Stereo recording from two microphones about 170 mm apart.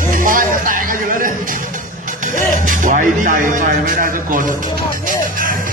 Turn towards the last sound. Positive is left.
turn(degrees=-55)  # may be behind; listen again after turning